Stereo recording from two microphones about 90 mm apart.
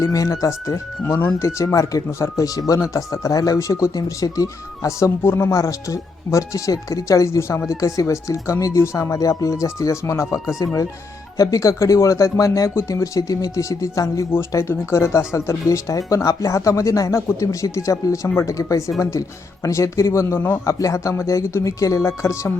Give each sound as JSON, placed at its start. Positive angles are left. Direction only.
{"t": 0.0, "sound": "speech", "side_deg": 40}
{"t": 1.0, "sound": "speech", "side_deg": 25}
{"t": 1.4, "sound": "speech", "side_deg": 35}